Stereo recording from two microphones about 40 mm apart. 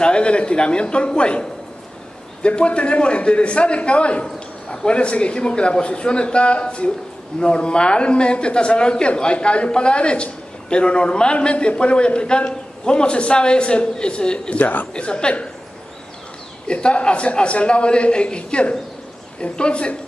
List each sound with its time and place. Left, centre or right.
0.0 s speech: left
14.6 s speech: left
15.0 s speech: left
16.6 s speech: left